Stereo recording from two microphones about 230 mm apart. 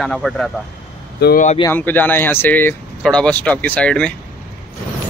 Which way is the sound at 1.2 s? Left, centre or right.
Left.